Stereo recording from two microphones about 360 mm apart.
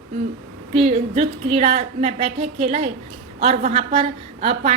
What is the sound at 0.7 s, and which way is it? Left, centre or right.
A woman's voice, centre.